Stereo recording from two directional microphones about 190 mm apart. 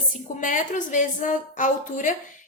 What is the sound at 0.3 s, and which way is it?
A woman's voice, 40° left (ahead or behind).